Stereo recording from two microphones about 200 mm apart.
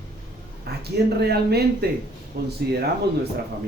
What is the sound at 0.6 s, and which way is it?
Speech, 55° right (ahead or behind).